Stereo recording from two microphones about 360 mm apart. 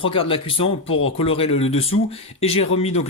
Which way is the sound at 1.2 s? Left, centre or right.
Centre.